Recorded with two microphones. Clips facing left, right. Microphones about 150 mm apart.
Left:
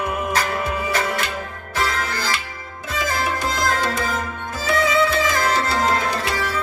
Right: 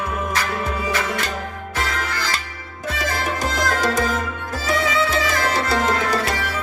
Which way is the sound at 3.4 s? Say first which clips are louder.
Right 3 dB; 40° right (ahead or behind).